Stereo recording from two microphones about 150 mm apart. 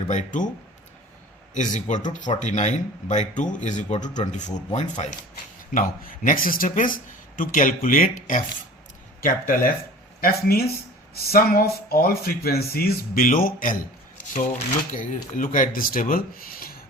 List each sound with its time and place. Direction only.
0.1 s speech: 55° left (ahead or behind)
1.5 s speech: 55° left (ahead or behind)
5.7 s speech: 65° left (ahead or behind)
11.1 s speech: 90° left; by 13.7 s 65° left (ahead or behind)
14.9 s speech: 60° left (ahead or behind); by 16.7 s 75° left (ahead or behind)